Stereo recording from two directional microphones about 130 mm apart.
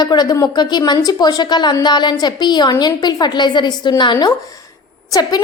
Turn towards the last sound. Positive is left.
turn(degrees=30)  # may be behind; listen again after turning